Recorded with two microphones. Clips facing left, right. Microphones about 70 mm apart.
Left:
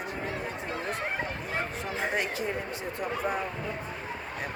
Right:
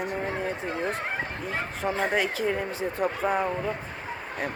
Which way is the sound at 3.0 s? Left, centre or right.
Right.